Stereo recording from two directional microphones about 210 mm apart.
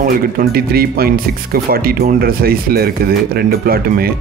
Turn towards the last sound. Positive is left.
turn(degrees=-45)  # may be behind; listen again after turning